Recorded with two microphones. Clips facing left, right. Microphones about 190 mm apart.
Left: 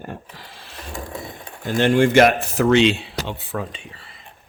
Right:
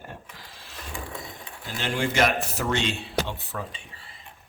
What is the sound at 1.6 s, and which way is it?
Speech, 55° left (ahead or behind).